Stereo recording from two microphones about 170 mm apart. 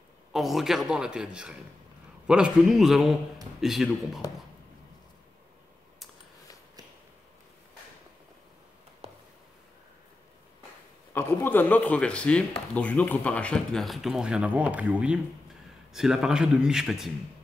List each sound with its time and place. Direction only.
0.3 s speech: centre (ahead or behind)
9.0 s a sound: 35° right (ahead or behind)
11.1 s a man's voice: 15° left (ahead or behind)